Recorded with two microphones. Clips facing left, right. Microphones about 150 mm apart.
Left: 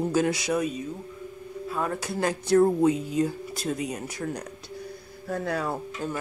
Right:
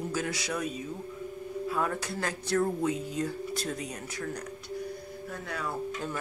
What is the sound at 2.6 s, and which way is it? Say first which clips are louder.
Speech: left 8 dB; 30° left (ahead or behind).